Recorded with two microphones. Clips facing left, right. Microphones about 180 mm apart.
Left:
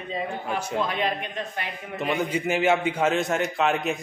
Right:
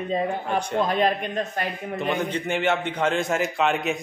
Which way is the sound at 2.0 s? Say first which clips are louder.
Left 1 dB; 5° left (ahead or behind).